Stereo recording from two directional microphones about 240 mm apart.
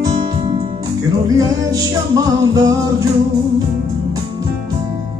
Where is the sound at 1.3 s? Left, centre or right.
Centre.